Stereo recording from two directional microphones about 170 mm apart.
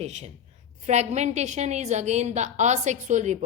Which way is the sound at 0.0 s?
40° right (ahead or behind).